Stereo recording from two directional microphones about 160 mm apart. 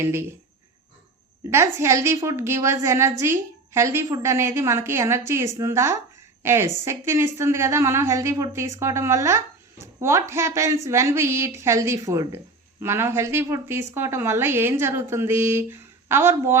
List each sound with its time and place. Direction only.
0.0 s a woman's voice: 15° right (ahead or behind)
1.5 s a woman's voice: 15° right (ahead or behind)